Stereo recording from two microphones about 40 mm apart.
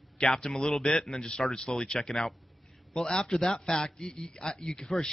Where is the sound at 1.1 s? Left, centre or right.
Left.